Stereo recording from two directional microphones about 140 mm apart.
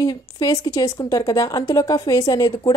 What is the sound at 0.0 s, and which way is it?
A woman's voice, 25° left (ahead or behind).